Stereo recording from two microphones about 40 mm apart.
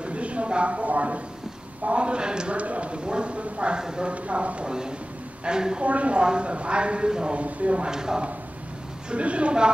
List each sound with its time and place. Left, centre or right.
0.0 s a sound: right
1.9 s a woman's voice: right
2.5 s a woman's voice: right
4.1 s a woman's voice: right
5.9 s a woman's voice: right
7.3 s speech: right
7.9 s speech: centre
9.1 s a woman's voice: right